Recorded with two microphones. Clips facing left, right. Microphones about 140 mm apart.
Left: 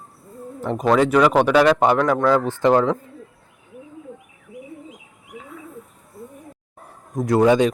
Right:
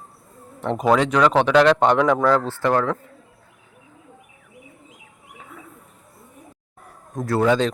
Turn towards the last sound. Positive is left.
turn(degrees=15)  # may be behind; listen again after turning